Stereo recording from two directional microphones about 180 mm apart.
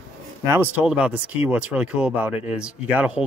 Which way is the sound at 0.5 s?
10° right (ahead or behind).